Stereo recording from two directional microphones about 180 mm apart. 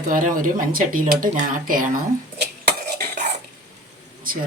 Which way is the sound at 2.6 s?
60° right (ahead or behind).